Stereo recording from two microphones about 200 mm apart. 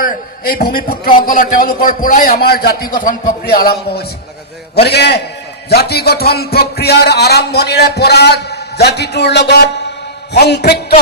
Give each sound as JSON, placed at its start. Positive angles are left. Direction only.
{"t": 0.0, "sound": "speech", "side_deg": 45}
{"t": 4.7, "sound": "a man's voice", "side_deg": 55}